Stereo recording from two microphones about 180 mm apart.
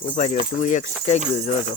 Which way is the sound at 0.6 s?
45° left (ahead or behind).